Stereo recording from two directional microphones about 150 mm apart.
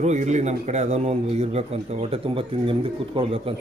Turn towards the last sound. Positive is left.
turn(degrees=-40)  # may be behind; listen again after turning